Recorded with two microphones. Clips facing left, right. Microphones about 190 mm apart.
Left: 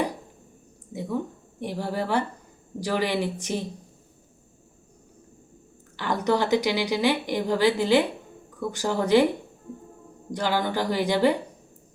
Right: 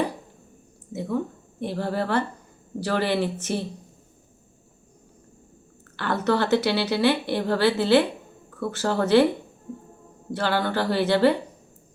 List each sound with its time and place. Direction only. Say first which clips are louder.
0.9 s a sound: right 2 dB; 10° left (ahead or behind)
1.6 s a woman's voice: right 2 dB; 15° left (ahead or behind)
6.0 s a woman's voice: right 1 dB; 15° left (ahead or behind)
10.3 s a woman's voice: right 1 dB; 15° left (ahead or behind)